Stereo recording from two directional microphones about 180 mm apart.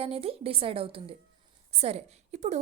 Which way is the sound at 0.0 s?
35° right (ahead or behind).